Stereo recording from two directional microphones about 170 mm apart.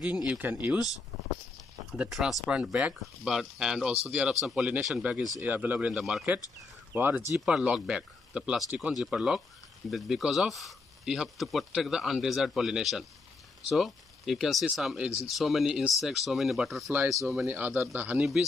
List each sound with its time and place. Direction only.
0.0 s speech: 5° right (ahead or behind)
1.9 s speech: 5° right (ahead or behind)
16.9 s speech: 15° right (ahead or behind)